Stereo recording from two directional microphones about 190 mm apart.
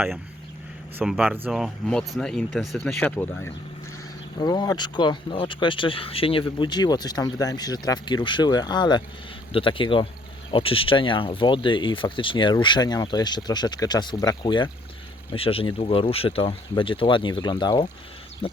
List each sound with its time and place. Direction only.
0.9 s speech: 5° right (ahead or behind)
4.4 s speech: 20° left (ahead or behind)